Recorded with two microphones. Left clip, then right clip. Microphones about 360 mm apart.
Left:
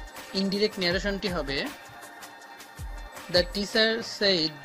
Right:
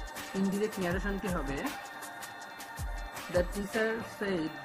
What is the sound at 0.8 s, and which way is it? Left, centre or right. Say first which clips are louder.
Speech: left 7 dB; left.